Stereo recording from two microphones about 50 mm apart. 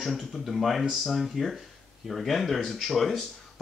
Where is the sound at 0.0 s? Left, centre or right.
Centre.